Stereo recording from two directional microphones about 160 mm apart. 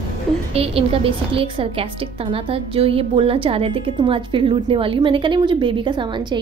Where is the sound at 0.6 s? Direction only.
35° right (ahead or behind).